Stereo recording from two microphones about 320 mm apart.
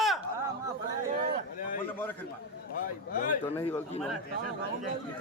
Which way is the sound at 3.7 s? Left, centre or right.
Centre.